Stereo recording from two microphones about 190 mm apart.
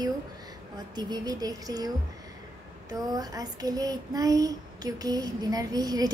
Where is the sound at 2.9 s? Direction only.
20° right (ahead or behind).